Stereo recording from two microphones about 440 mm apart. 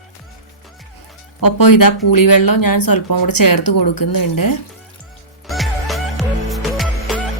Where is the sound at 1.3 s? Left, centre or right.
Left.